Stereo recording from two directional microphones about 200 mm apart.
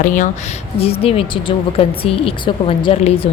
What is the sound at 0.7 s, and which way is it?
Speech, 30° left (ahead or behind).